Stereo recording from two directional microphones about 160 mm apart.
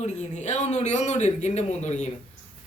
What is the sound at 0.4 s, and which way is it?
Speech, 45° left (ahead or behind).